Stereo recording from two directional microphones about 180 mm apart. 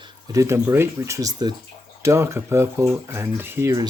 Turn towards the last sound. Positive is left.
turn(degrees=-15)  # may be behind; listen again after turning